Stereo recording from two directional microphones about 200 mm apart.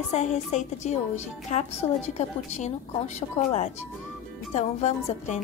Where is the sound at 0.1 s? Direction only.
35° left (ahead or behind).